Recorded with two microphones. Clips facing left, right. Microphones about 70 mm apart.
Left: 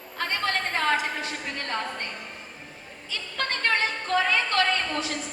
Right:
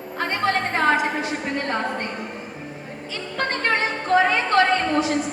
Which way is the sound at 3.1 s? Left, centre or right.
Right.